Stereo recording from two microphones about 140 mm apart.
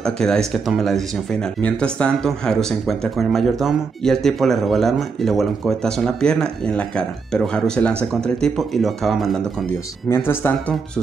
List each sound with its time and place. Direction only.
0.0 s speech: 5° left (ahead or behind)
10.0 s speech: 15° left (ahead or behind)